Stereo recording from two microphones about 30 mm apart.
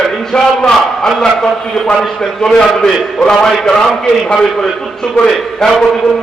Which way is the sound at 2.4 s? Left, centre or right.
Left.